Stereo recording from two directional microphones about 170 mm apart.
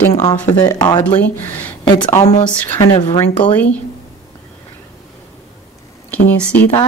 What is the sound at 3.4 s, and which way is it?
Speech, 10° left (ahead or behind).